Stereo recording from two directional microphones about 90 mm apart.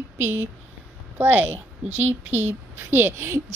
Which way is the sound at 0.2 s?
30° right (ahead or behind).